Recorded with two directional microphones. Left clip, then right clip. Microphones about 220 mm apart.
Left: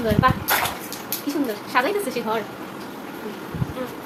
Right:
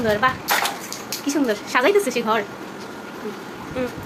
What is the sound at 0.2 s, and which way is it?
A woman's voice, 35° right (ahead or behind).